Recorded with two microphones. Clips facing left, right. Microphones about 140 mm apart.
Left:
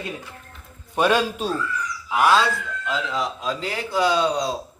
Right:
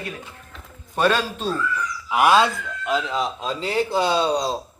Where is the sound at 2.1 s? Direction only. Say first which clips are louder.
Right 2 dB; 15° right (ahead or behind).